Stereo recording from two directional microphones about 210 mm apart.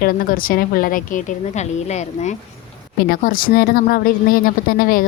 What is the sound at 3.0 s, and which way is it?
A woman's voice, 40° left (ahead or behind).